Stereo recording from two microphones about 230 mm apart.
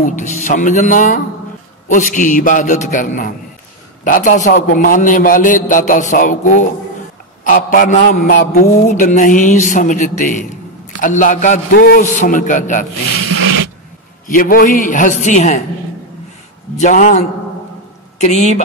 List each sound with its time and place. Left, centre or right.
0.0 s a man's voice: left
7.4 s a man's voice: left
13.2 s rub: right
14.3 s a man's voice: left
16.7 s a man's voice: left